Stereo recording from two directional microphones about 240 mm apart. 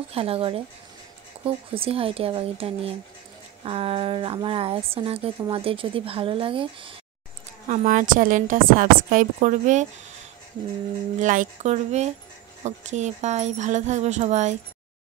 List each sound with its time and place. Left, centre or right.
0.1 s a woman's voice: right
7.6 s a woman's voice: right
11.1 s a woman's voice: right